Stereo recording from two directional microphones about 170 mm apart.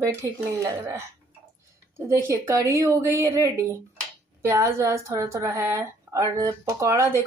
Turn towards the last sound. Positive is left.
turn(degrees=-15)  # may be behind; listen again after turning